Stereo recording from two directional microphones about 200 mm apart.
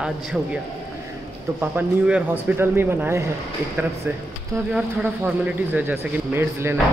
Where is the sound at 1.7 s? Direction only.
5° right (ahead or behind).